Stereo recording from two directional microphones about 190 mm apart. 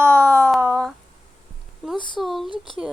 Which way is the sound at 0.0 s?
15° right (ahead or behind).